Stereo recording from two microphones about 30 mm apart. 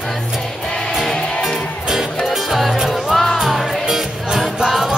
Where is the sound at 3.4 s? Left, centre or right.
Centre.